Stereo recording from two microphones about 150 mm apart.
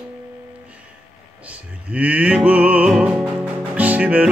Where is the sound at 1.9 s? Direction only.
10° right (ahead or behind).